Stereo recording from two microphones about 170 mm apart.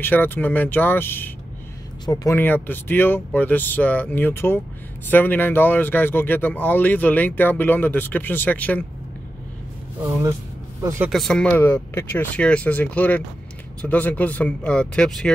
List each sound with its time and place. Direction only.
0.0 s speech: 10° left (ahead or behind)
10.8 s speech: 20° right (ahead or behind)
11.1 s speech: centre (ahead or behind)